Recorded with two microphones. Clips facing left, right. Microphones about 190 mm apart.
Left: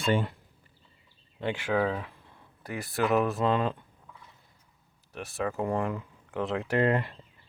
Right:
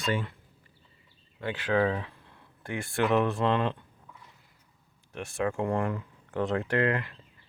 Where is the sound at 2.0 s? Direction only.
15° left (ahead or behind).